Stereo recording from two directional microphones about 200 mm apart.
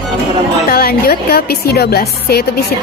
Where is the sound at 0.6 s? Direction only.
50° left (ahead or behind).